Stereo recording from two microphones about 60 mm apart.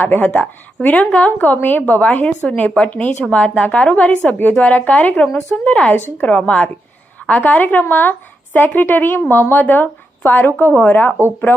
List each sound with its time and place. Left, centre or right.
0.0 s a woman's voice: left